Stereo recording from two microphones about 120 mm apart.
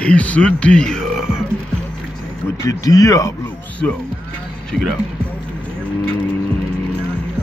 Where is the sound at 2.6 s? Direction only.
30° left (ahead or behind).